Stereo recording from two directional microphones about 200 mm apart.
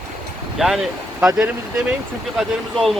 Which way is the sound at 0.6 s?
Centre (ahead or behind).